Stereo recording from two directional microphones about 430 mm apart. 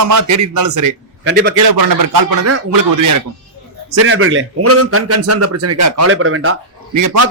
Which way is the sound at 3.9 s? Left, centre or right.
Right.